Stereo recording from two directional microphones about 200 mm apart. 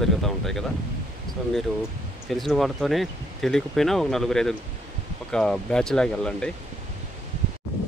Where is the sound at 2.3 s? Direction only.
Centre (ahead or behind).